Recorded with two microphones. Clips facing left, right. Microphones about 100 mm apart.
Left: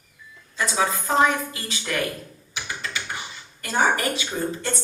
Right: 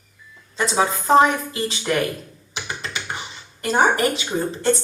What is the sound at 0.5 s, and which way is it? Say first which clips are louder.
A woman's voice: right 3 dB; 25° right (ahead or behind).